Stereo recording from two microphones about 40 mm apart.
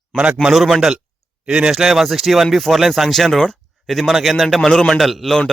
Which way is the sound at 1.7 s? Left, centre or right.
Centre.